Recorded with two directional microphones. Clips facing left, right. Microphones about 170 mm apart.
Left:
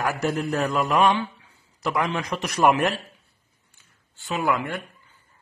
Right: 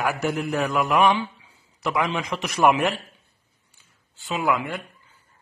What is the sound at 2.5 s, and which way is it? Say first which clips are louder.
Speech: even; 5° right (ahead or behind).